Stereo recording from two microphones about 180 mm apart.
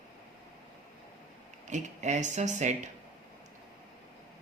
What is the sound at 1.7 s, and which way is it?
Speech, 40° right (ahead or behind).